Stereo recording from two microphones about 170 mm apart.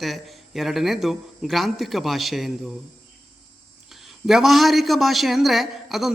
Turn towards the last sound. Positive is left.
turn(degrees=0)  # may be behind; listen again after turning